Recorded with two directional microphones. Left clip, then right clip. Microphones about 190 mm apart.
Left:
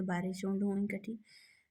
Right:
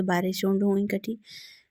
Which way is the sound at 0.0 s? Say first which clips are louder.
Right 12 dB; 45° right (ahead or behind).